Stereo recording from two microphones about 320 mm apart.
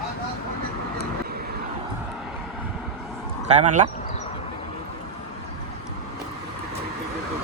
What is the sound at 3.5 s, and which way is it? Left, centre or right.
Speech, right.